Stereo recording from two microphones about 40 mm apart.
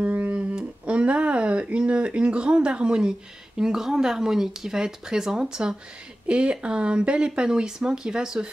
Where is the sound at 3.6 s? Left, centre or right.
Centre.